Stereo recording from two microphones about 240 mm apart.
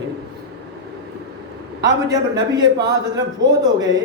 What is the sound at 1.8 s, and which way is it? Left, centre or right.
A man's voice, centre.